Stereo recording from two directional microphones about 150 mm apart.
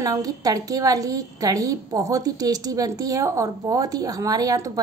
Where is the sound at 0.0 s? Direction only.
25° right (ahead or behind).